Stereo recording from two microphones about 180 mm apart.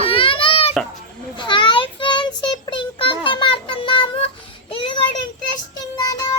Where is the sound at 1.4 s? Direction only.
25° left (ahead or behind).